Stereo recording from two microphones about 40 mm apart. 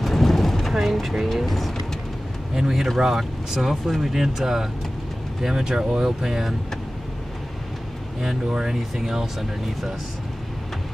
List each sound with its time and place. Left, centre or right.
0.0 s vehicle: centre
1.1 s speech: centre
2.5 s speech: centre
8.5 s speech: right
8.9 s speech: centre